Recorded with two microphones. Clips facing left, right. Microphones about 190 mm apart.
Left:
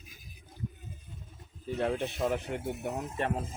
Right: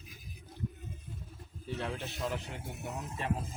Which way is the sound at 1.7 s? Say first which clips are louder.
Left 7 dB; 50° left (ahead or behind).